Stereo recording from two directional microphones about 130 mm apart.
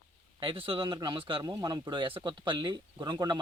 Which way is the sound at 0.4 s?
45° right (ahead or behind).